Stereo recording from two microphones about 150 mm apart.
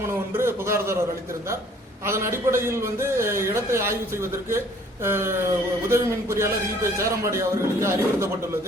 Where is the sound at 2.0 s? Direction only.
20° right (ahead or behind).